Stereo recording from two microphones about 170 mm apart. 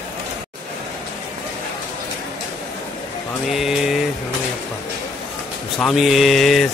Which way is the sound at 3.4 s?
Centre (ahead or behind).